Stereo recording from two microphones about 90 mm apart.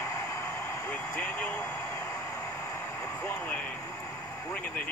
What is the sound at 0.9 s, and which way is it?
Speech, 20° left (ahead or behind).